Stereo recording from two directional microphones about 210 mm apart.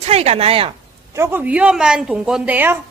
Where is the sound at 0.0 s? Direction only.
30° right (ahead or behind).